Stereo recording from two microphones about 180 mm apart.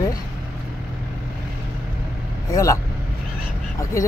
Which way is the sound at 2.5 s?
15° left (ahead or behind).